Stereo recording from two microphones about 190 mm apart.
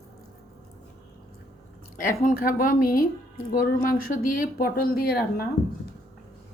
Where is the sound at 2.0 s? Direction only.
45° left (ahead or behind).